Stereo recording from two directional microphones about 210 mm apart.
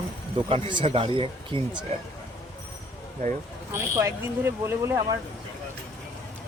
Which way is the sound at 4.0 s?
10° right (ahead or behind).